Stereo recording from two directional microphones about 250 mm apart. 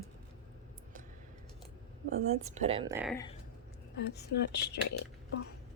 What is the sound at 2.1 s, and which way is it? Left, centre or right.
Speech, right.